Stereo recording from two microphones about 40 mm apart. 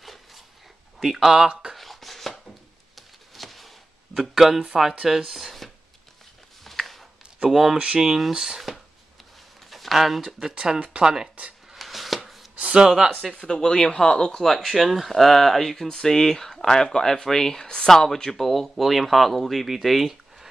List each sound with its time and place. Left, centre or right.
0.0 s dog: centre
0.9 s speech: centre
1.7 s a sound: centre
4.2 s speech: centre
6.6 s a sound: centre
7.4 s speech: centre
9.7 s speech: centre
10.5 s speech: right
11.7 s a sound: centre
12.5 s a sound: right
12.8 s speech: centre
13.5 s speech: centre
14.6 s speech: centre